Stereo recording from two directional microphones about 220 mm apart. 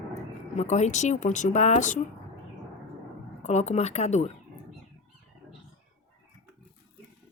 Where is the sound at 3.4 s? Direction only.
30° left (ahead or behind).